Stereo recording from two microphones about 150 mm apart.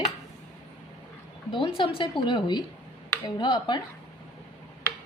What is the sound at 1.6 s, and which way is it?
A woman's voice, 35° left (ahead or behind).